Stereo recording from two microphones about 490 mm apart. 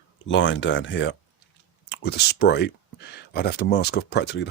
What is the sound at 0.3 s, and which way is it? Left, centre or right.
Speech, left.